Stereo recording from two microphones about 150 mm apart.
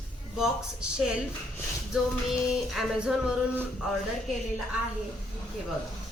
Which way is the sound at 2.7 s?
5° right (ahead or behind).